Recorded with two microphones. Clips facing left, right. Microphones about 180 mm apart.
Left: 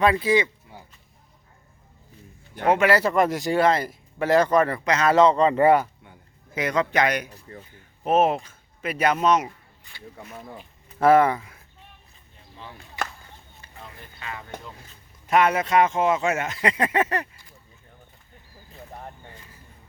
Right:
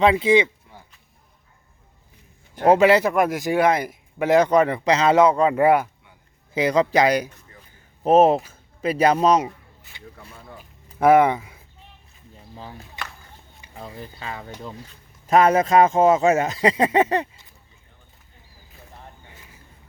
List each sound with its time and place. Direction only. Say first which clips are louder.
0.0 s a sound: right 3 dB; 20° right (ahead or behind)
2.6 s speech: right 5 dB; 35° right (ahead or behind)
2.9 s speech: right 2 dB; 10° right (ahead or behind)
4.9 s a sound: right 3 dB; 30° right (ahead or behind)
5.1 s speech: left 2 dB; 10° right (ahead or behind)
6.5 s speech: right 5 dB; 30° right (ahead or behind)
7.3 s speech: left 6 dB; 35° left (ahead or behind)
8.0 s speech: right 5 dB; 35° right (ahead or behind)
11.0 s speech: right 2 dB; 15° right (ahead or behind)
13.7 s speech: right 8 dB; 35° right (ahead or behind)
16.6 s a sound: right 5 dB; 30° right (ahead or behind)